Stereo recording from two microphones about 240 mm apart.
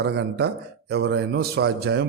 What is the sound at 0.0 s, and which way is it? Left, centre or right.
A man's voice, right.